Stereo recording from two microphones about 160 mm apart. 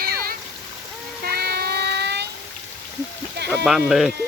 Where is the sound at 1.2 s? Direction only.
80° right.